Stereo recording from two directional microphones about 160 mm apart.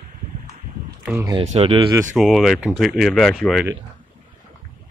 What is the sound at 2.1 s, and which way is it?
Speech, centre (ahead or behind).